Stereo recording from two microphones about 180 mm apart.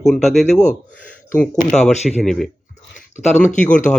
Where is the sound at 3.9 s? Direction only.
5° left (ahead or behind).